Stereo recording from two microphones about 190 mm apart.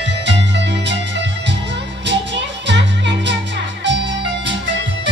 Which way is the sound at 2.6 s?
65° right (ahead or behind).